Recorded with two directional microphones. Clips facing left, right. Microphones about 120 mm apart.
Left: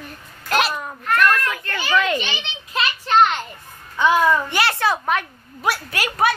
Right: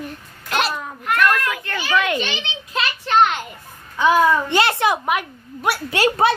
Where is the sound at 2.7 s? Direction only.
Centre (ahead or behind).